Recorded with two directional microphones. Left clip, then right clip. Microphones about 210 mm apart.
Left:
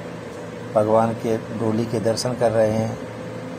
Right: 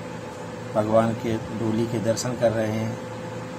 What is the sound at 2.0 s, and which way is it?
Speech, centre (ahead or behind).